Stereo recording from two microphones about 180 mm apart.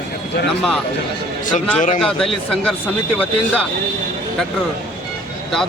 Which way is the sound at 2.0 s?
Centre (ahead or behind).